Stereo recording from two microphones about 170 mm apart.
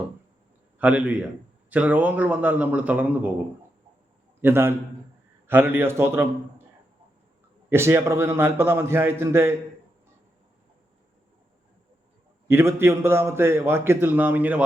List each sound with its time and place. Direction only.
0.8 s a man's voice: 10° right (ahead or behind)
4.4 s a man's voice: 15° right (ahead or behind)
7.7 s a man's voice: 15° right (ahead or behind)
12.5 s a man's voice: 15° right (ahead or behind)